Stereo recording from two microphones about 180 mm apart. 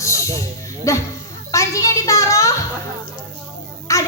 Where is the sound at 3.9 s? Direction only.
15° left (ahead or behind).